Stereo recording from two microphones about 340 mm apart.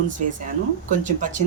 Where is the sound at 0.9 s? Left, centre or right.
Right.